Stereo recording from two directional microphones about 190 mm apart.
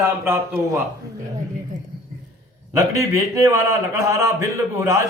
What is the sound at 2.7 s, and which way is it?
A man's voice, 15° right (ahead or behind).